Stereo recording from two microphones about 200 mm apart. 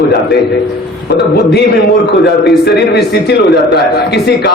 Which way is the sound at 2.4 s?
55° left (ahead or behind).